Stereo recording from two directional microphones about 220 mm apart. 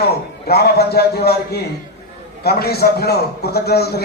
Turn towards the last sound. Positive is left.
turn(degrees=45)  # may be behind; listen again after turning